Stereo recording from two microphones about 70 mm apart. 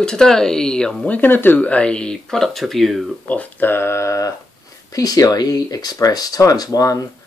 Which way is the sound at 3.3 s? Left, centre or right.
Left.